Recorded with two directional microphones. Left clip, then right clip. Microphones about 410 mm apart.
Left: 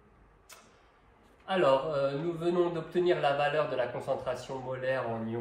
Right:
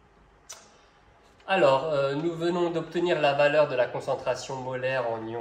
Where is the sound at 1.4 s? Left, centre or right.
Right.